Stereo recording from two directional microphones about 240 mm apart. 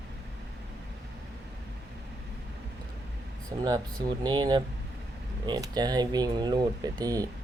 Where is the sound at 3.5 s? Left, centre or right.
Centre.